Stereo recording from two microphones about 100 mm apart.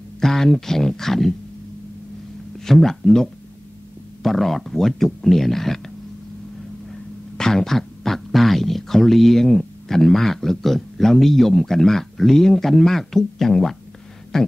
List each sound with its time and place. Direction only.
0.2 s speech: 5° left (ahead or behind)
2.6 s speech: 5° left (ahead or behind)
7.3 s speech: 5° left (ahead or behind)